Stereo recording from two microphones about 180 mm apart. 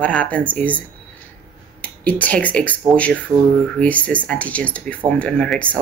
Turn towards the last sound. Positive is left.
turn(degrees=5)  # may be behind; listen again after turning